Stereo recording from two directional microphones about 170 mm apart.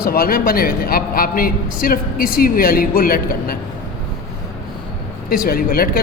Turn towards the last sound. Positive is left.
turn(degrees=60)  # may be behind; listen again after turning